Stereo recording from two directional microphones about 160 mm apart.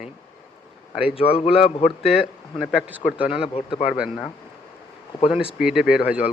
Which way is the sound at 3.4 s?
35° left (ahead or behind).